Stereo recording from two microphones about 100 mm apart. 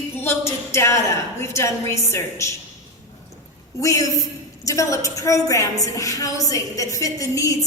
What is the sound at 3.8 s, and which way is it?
A woman's voice, 35° left (ahead or behind).